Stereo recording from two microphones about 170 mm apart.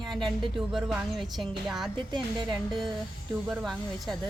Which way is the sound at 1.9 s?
25° right (ahead or behind).